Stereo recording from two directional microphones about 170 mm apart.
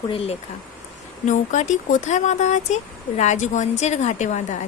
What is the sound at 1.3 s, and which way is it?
A woman's voice, 45° left (ahead or behind).